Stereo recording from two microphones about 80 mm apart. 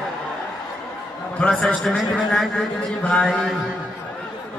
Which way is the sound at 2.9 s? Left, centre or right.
Centre.